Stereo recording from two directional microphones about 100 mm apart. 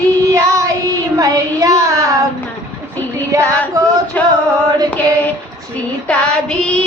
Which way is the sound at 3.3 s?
35° right (ahead or behind).